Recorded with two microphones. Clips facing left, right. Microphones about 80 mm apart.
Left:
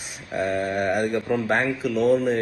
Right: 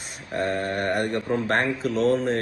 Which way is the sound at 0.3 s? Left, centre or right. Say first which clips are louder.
Left 2 dB; centre.